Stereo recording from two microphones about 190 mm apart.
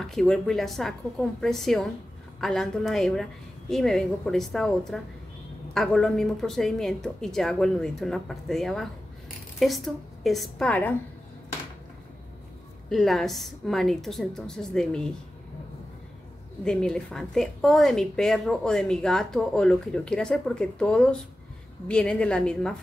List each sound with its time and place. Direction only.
0.0 s a woman's voice: 5° left (ahead or behind)
12.9 s a woman's voice: centre (ahead or behind)
16.6 s a woman's voice: 5° left (ahead or behind)